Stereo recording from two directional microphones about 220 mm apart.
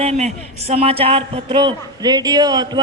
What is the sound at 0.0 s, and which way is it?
A man's voice, 30° right (ahead or behind).